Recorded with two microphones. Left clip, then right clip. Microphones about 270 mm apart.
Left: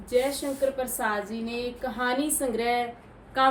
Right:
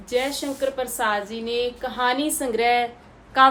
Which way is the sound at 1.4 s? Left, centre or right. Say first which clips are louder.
Right 7 dB; centre.